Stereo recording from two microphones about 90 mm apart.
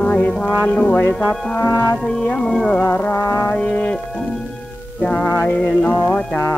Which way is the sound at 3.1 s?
30° left (ahead or behind).